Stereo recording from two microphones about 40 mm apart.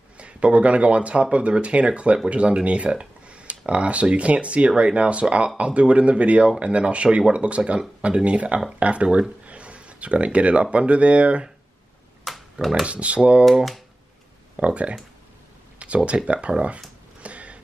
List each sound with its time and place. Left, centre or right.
0.2 s speech: right
12.3 s pig: centre
12.8 s speech: right
14.6 s speech: right
17.2 s a sound: right